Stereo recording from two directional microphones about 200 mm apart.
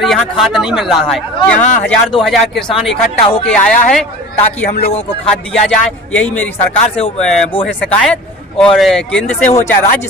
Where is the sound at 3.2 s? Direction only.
25° left (ahead or behind).